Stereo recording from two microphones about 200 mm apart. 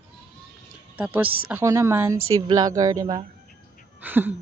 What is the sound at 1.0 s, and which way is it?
Speech, 10° right (ahead or behind).